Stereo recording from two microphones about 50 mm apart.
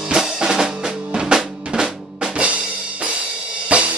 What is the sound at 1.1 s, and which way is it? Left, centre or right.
Drum, centre.